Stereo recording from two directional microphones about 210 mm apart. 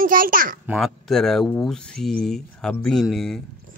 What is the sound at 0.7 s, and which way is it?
Speech, centre (ahead or behind).